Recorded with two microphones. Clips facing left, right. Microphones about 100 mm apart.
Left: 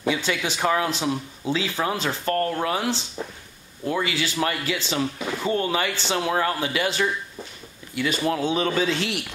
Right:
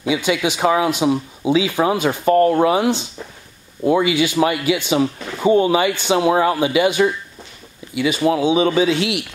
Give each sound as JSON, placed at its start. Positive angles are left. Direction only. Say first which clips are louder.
{"t": 0.0, "sound": "speech", "louder": "right 6 dB", "side_deg": -10}